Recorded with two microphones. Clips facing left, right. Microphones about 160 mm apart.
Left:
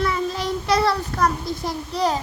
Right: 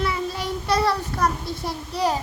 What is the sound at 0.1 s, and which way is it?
Child singing, 10° right (ahead or behind).